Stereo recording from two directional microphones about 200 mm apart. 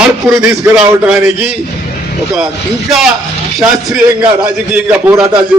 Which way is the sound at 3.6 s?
Centre (ahead or behind).